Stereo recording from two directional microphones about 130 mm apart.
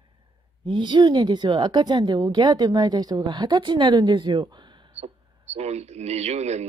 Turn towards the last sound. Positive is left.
turn(degrees=-55)  # may be behind; listen again after turning